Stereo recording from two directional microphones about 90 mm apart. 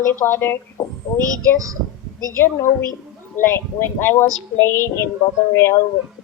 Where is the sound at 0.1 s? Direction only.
25° left (ahead or behind).